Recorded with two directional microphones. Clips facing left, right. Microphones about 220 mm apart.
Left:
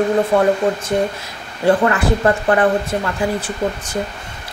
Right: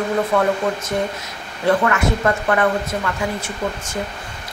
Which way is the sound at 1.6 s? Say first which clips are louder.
Left 3 dB; 30° left (ahead or behind).